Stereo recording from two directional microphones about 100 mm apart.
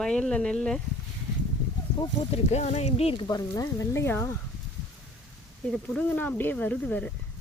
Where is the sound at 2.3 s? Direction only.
90° left.